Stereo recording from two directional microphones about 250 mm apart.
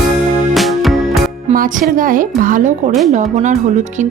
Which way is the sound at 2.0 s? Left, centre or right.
Right.